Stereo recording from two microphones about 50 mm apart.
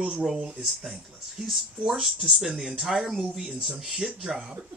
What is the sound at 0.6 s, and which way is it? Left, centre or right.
Speech, centre.